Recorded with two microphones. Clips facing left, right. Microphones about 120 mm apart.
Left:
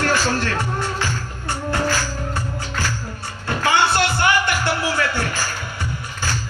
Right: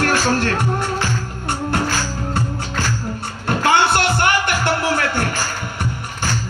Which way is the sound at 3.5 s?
60° right (ahead or behind).